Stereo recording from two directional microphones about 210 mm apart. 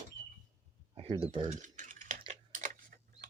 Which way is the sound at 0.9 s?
25° right (ahead or behind).